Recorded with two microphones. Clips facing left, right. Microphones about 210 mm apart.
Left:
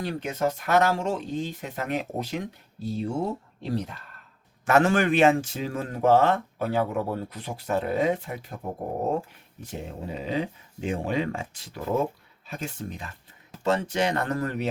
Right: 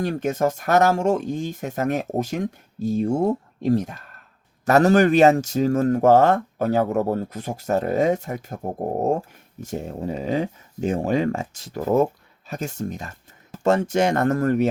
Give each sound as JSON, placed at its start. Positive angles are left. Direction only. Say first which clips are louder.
{"t": 0.0, "sound": "speech", "louder": "right 5 dB", "side_deg": -45}